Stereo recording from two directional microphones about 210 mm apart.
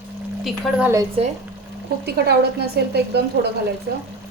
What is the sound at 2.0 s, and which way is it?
A woman's voice, 50° right (ahead or behind).